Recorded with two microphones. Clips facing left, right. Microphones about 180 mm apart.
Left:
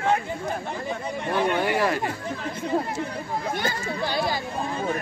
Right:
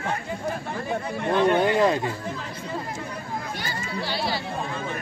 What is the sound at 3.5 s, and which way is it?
Speech, 50° left (ahead or behind).